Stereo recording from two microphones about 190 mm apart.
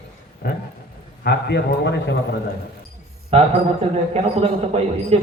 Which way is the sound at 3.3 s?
30° right (ahead or behind).